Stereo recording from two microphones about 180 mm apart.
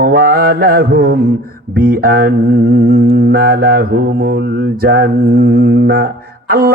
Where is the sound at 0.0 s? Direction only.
55° right (ahead or behind).